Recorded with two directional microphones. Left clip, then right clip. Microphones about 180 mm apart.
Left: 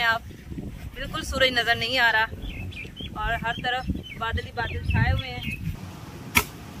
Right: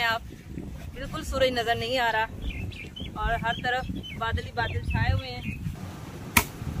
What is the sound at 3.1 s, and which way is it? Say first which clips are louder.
Speech: even; centre (ahead or behind).